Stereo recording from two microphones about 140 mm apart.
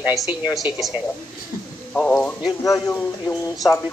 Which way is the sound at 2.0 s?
5° left (ahead or behind).